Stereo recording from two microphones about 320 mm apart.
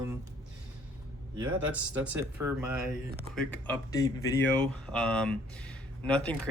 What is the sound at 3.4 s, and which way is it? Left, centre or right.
Speech, centre.